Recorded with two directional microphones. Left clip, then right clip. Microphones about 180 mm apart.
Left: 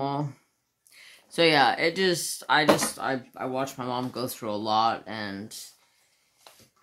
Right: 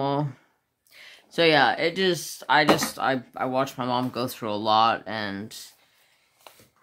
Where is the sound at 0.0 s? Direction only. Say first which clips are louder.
Right 4 dB; 25° right (ahead or behind).